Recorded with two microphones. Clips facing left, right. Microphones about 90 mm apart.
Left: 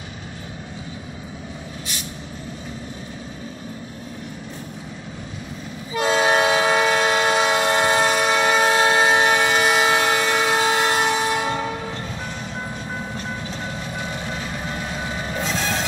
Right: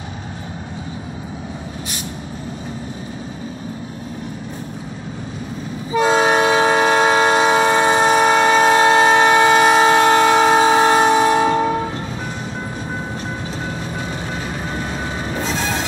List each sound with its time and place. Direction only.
5.9 s train: 30° right (ahead or behind); by 10.7 s 50° right (ahead or behind)
10.7 s train: 35° right (ahead or behind)
15.3 s train: 5° right (ahead or behind)